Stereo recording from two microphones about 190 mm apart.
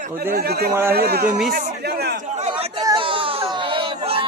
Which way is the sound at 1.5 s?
55° right (ahead or behind).